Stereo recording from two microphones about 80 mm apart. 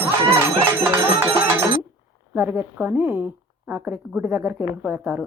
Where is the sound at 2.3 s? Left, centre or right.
Right.